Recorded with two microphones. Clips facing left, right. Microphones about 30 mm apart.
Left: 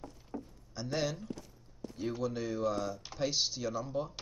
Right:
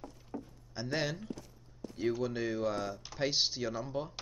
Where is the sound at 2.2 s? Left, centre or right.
Centre.